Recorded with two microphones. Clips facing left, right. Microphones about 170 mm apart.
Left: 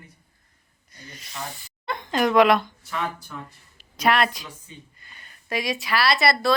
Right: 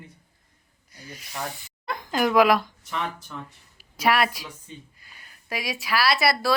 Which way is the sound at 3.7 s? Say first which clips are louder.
Left 1 dB; 5° right (ahead or behind).